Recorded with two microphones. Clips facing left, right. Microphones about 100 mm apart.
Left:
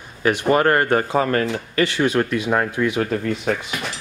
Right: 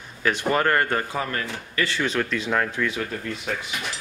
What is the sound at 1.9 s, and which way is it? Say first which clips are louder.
Speech: left 6 dB; 10° left (ahead or behind).